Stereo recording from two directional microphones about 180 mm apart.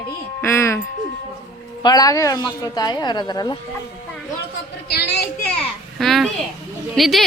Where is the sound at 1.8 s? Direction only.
20° left (ahead or behind).